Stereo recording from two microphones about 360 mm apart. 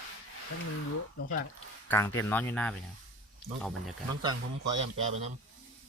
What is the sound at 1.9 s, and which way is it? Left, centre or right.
Speech, centre.